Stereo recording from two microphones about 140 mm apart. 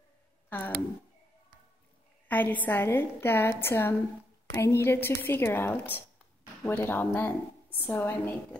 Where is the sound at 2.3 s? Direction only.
10° left (ahead or behind).